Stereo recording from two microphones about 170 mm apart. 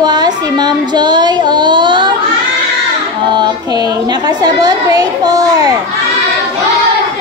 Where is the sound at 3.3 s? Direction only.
25° right (ahead or behind).